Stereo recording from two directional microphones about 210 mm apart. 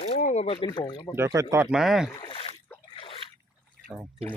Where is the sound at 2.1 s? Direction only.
25° left (ahead or behind).